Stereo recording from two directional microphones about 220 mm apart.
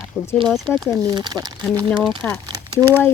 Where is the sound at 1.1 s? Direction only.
20° right (ahead or behind).